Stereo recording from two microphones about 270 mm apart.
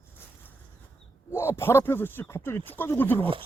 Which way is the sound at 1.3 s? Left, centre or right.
Centre.